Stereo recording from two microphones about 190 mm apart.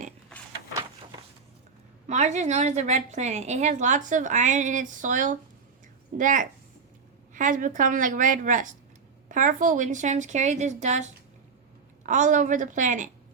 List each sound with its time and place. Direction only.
2.0 s a woman's voice: 35° right (ahead or behind)